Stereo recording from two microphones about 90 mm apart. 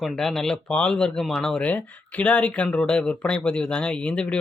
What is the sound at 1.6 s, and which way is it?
Speech, 15° left (ahead or behind).